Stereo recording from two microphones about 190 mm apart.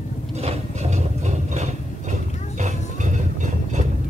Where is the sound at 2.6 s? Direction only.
40° right (ahead or behind).